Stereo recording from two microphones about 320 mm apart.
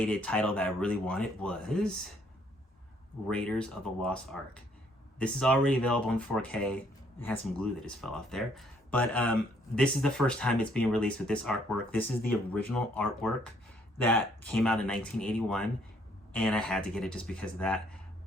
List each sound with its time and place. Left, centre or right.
0.0 s speech: centre
3.2 s speech: centre